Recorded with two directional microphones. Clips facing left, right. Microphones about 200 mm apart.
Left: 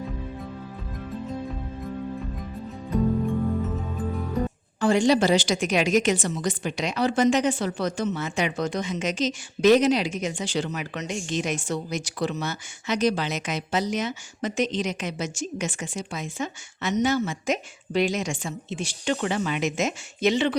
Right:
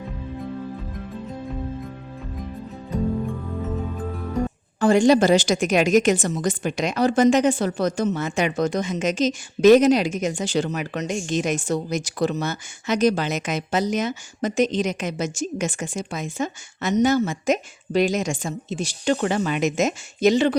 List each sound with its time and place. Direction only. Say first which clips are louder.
4.8 s a woman's voice: right 4 dB; 45° right (ahead or behind)